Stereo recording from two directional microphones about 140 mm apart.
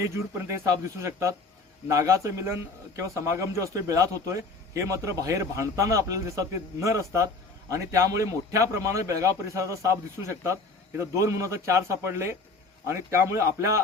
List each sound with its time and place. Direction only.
0.0 s a man's voice: 20° right (ahead or behind)